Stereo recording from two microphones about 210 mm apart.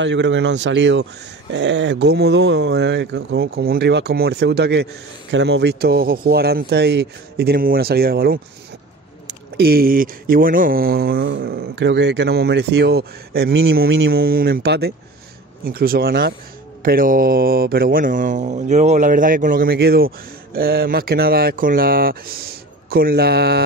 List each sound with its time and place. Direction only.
0.0 s speech: 60° right (ahead or behind)
9.6 s speech: 45° right (ahead or behind)